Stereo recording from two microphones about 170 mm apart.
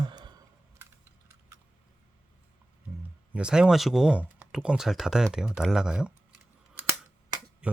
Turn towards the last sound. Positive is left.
turn(degrees=-5)  # may be behind; listen again after turning